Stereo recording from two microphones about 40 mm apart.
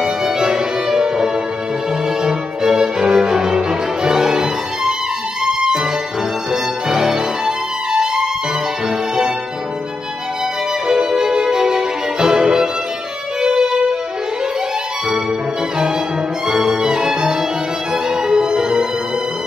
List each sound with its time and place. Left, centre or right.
0.0 s music: centre
10.9 s music: centre
16.4 s violin: centre
18.1 s music: centre